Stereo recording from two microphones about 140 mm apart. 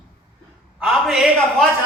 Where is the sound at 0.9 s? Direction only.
5° right (ahead or behind).